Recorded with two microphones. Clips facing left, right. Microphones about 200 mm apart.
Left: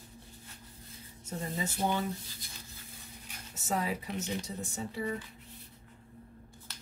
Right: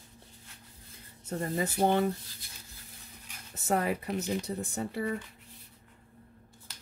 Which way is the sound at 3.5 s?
55° right (ahead or behind).